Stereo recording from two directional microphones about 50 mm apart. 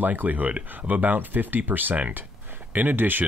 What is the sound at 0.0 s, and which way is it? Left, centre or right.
Speech, right.